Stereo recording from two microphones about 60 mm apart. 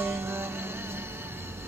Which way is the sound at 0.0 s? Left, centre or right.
Right.